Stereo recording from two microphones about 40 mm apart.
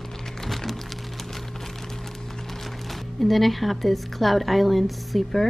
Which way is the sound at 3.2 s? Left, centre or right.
Centre.